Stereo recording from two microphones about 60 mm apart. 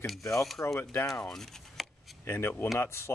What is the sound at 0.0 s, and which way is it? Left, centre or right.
Speech, centre.